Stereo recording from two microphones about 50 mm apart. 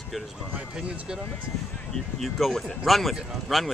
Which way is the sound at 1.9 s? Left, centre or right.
Centre.